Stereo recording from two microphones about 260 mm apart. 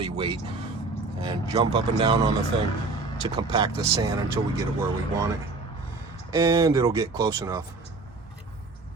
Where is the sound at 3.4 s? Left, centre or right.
Centre.